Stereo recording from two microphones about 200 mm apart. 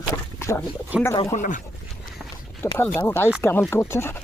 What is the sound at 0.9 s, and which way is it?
Speech, 5° right (ahead or behind).